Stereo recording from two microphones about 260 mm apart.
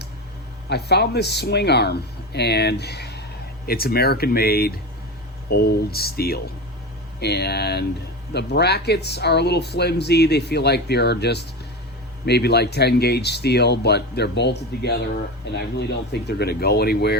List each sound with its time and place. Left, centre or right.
0.7 s speech: left